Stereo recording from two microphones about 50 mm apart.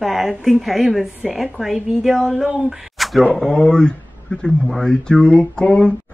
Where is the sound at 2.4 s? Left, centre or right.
Centre.